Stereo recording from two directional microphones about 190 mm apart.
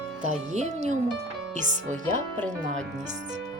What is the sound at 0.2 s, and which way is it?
Speech, 40° right (ahead or behind).